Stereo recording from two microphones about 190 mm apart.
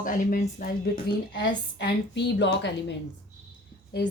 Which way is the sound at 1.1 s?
65° left (ahead or behind).